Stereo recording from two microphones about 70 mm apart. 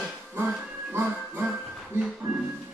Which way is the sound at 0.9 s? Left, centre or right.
Right.